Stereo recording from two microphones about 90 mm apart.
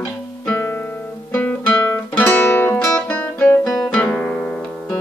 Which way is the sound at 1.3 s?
15° left (ahead or behind).